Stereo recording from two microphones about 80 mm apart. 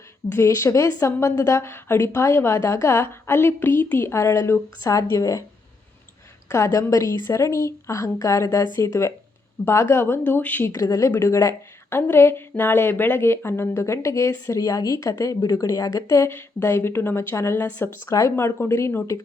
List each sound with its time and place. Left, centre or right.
0.3 s a woman's voice: left
6.5 s a woman's voice: left
10.7 s a woman's voice: left